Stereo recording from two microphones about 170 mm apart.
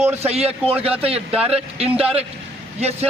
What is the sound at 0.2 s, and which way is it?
Speech, 35° right (ahead or behind).